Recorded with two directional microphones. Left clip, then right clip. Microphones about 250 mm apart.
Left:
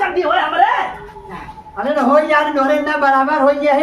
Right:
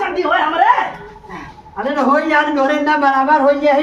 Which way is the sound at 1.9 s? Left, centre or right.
Centre.